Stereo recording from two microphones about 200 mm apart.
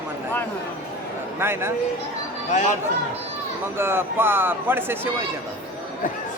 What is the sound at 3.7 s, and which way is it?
A man's voice, 10° right (ahead or behind).